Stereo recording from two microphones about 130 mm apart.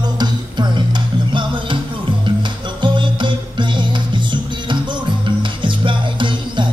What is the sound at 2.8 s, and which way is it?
Music, 40° right (ahead or behind).